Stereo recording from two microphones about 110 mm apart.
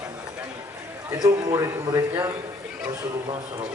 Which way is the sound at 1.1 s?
35° right (ahead or behind).